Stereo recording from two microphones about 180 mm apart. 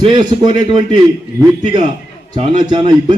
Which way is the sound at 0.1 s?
25° right (ahead or behind).